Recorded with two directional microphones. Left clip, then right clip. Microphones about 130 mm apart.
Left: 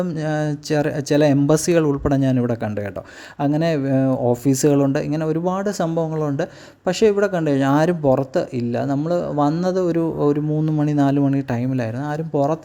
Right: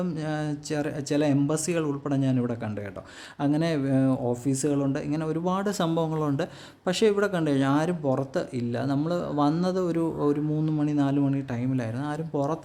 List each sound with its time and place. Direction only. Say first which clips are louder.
0.0 s speech: left 8 dB; 40° left (ahead or behind)
4.3 s speech: left 10 dB; 50° left (ahead or behind); by 10.8 s 30° left (ahead or behind)
10.8 s speech: left 7 dB; 45° left (ahead or behind)